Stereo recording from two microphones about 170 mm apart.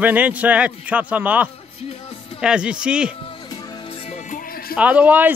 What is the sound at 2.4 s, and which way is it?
Speech, 5° right (ahead or behind).